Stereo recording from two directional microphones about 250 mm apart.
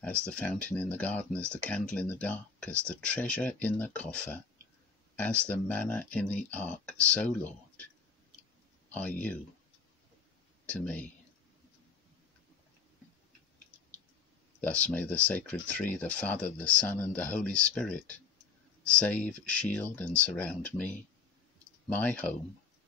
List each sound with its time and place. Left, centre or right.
0.0 s speech: centre
8.9 s speech: centre
10.7 s speech: centre
14.6 s speech: centre